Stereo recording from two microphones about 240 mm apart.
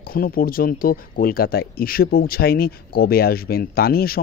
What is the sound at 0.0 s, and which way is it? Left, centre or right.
Speech, left.